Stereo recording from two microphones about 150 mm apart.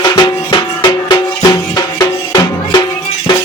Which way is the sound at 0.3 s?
30° left (ahead or behind).